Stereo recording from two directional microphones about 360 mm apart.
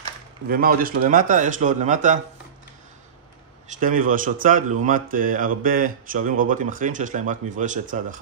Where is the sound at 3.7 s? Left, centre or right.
Right.